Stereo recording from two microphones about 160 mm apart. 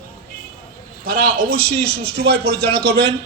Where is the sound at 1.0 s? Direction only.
70° right (ahead or behind); by 2.9 s 90° right.